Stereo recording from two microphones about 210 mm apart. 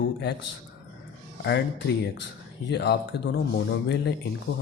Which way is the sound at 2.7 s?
55° left (ahead or behind).